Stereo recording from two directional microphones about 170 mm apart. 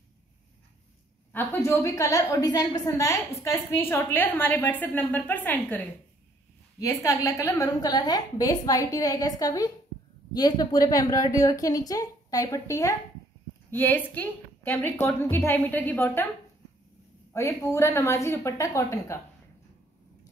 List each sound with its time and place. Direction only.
1.3 s a woman's voice: 15° left (ahead or behind)
17.3 s a woman's voice: 15° left (ahead or behind)